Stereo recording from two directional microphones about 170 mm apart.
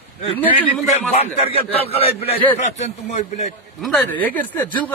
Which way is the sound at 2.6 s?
40° left (ahead or behind).